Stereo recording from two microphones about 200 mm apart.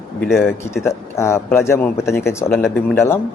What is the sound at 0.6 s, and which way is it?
Speech, 15° left (ahead or behind).